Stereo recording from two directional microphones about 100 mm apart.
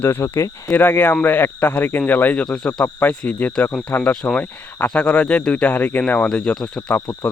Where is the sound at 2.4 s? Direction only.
5° left (ahead or behind).